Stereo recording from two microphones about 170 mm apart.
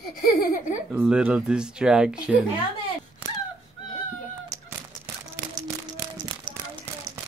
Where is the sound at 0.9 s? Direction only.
5° right (ahead or behind).